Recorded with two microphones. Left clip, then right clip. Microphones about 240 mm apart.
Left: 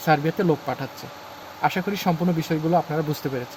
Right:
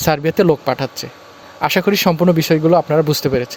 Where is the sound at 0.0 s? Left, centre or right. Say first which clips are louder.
Right 7 dB; right.